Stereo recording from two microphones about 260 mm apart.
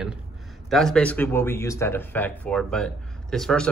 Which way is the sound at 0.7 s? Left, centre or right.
Centre.